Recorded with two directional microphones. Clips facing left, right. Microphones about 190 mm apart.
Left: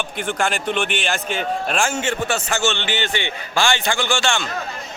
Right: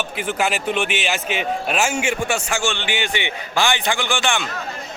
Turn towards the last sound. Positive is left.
turn(degrees=-15)  # may be behind; listen again after turning